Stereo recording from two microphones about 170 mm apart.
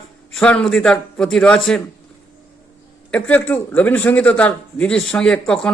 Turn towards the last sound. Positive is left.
turn(degrees=5)  # may be behind; listen again after turning